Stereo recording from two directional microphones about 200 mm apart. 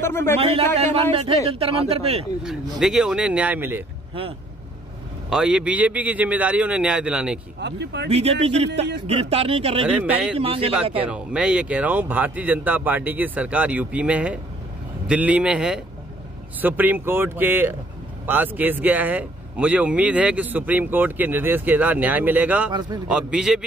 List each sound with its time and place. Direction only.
0.0 s a man's voice: 10° left (ahead or behind)
0.4 s speech: 30° right (ahead or behind)
2.8 s a man's voice: 5° right (ahead or behind)
5.3 s a man's voice: 5° right (ahead or behind)
7.6 s speech: 60° right (ahead or behind)
8.1 s speech: 30° right (ahead or behind)
9.9 s speech: 10° right (ahead or behind)
10.3 s speech: 30° right (ahead or behind)
11.0 s a man's voice: 5° right (ahead or behind)
22.7 s speech: 20° right (ahead or behind)
23.0 s a man's voice: 5° right (ahead or behind)